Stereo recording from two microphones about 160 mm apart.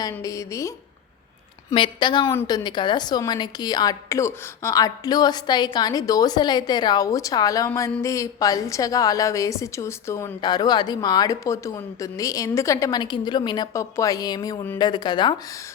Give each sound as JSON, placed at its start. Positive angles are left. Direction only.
{"t": 0.1, "sound": "a woman's voice", "side_deg": 20}
{"t": 1.7, "sound": "a woman's voice", "side_deg": 30}